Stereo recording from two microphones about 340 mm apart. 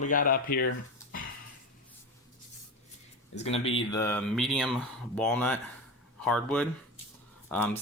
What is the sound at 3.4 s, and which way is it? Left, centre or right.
Speech, centre.